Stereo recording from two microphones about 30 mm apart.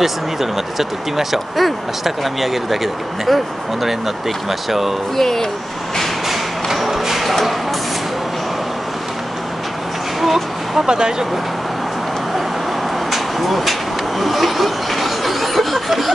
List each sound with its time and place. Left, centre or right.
0.0 s speech: centre
4.5 s speech: centre
5.1 s speech: centre
6.2 s music: centre
10.2 s a sound: centre
10.9 s speech: right
13.1 s vehicle: centre